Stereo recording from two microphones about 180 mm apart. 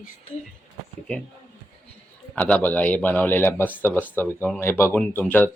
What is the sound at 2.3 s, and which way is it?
A man's voice, 10° left (ahead or behind).